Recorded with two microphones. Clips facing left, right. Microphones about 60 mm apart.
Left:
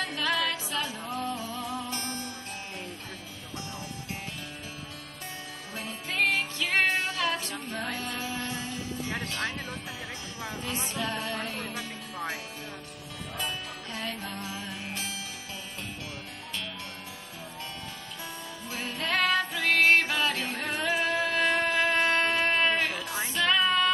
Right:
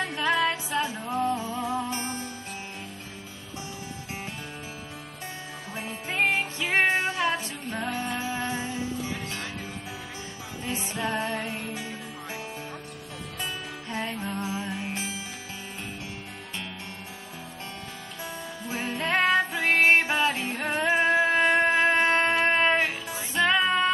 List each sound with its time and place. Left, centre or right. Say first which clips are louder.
0.0 s music: right 4 dB; right
5.8 s music: right 2 dB; right
10.6 s music: right 3 dB; right
13.4 s music: even; centre
18.9 s music: right 3 dB; right